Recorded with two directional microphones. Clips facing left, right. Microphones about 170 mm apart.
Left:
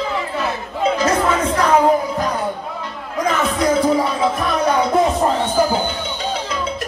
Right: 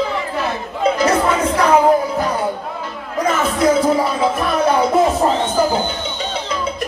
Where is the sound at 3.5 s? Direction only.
Centre (ahead or behind).